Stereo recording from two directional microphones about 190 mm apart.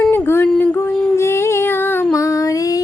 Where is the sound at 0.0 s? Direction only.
5° left (ahead or behind).